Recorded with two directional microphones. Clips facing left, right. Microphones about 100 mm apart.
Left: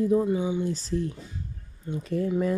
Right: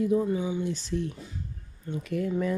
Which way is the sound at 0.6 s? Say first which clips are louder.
Left 2 dB; 35° left (ahead or behind).